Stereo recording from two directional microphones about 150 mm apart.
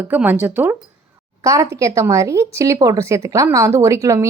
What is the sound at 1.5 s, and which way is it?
A woman's voice, 20° right (ahead or behind).